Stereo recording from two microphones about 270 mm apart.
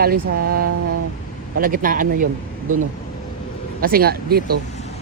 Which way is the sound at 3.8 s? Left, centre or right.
Right.